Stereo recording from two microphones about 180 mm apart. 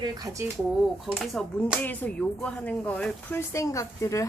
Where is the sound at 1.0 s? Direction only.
Centre (ahead or behind).